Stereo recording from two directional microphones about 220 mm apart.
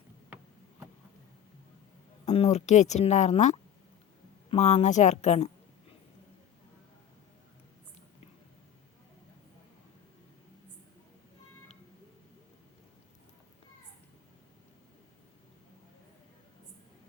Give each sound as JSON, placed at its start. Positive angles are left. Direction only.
{"t": 2.2, "sound": "speech", "side_deg": 30}